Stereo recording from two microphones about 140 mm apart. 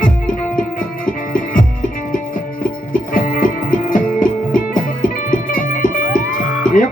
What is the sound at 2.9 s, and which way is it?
Music, 80° left.